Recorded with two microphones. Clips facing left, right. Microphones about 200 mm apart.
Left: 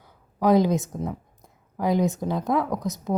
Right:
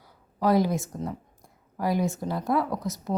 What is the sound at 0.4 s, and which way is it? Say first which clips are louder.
A woman's voice: left 3 dB; 20° left (ahead or behind).